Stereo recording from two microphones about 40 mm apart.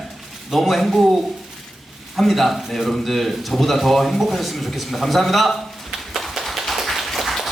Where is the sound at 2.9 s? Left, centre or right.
Centre.